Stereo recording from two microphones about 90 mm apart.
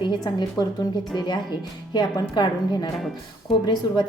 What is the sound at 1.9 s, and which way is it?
A woman's voice, 55° left (ahead or behind).